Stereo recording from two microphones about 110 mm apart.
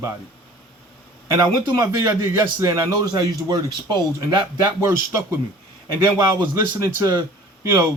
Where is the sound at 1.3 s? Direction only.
30° right (ahead or behind).